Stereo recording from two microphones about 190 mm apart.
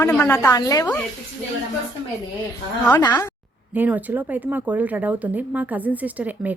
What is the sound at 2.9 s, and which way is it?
Speech, 20° left (ahead or behind).